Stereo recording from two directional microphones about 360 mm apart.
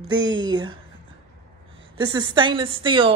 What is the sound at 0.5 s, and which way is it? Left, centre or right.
Speech, centre.